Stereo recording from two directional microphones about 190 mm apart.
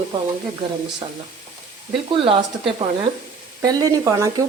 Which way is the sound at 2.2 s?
30° right (ahead or behind).